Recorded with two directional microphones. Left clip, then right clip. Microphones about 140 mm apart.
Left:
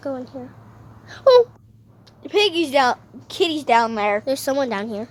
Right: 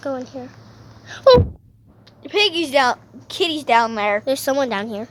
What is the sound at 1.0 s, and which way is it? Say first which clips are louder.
Wail: right 3 dB; 5° left (ahead or behind).